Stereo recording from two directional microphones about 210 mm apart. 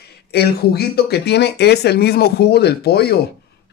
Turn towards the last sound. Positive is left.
turn(degrees=50)  # may be behind; listen again after turning